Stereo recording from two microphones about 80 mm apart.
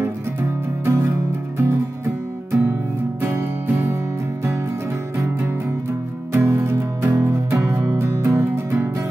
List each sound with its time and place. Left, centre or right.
0.8 s music: right
5.1 s music: right